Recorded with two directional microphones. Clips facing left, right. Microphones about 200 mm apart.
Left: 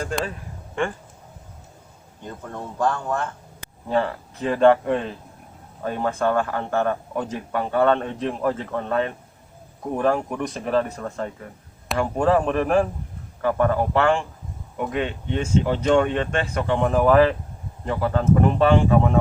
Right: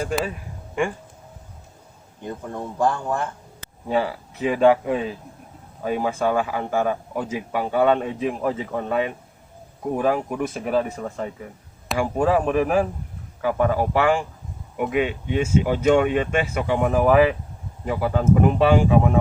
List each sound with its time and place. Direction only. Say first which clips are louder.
0.0 s speech: right 2 dB; 10° right (ahead or behind)
2.2 s speech: right 3 dB; 10° right (ahead or behind)